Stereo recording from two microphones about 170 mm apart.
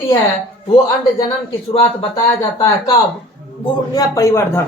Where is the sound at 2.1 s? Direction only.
20° left (ahead or behind).